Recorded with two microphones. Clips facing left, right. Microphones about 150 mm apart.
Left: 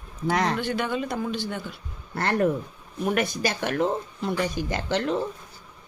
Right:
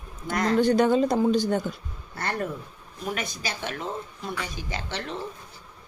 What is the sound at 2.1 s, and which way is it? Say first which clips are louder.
Speech: left 7 dB; 60° left (ahead or behind).